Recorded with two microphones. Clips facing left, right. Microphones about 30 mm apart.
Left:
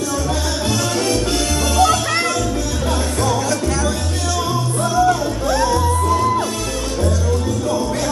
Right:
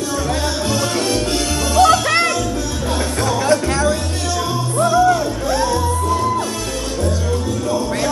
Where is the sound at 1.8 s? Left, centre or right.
Right.